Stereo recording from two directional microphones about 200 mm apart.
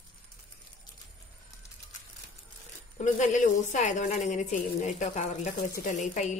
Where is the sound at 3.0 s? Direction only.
35° left (ahead or behind).